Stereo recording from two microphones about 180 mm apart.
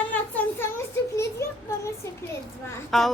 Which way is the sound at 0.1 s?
10° left (ahead or behind).